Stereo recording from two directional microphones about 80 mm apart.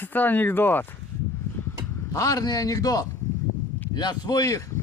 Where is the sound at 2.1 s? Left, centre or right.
Left.